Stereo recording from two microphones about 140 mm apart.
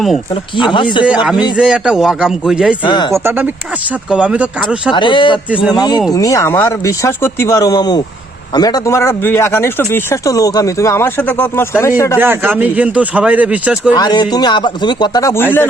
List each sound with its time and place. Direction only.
0.5 s speech: 35° left (ahead or behind)
1.0 s a man's voice: 10° right (ahead or behind)
2.8 s speech: 30° left (ahead or behind)
3.2 s speech: 15° right (ahead or behind)
4.9 s speech: 35° left (ahead or behind)
12.2 s speech: 15° right (ahead or behind)
13.9 s speech: 30° left (ahead or behind)